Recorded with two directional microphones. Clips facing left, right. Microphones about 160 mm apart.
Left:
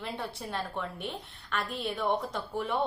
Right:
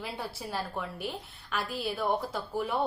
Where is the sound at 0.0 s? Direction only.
5° right (ahead or behind).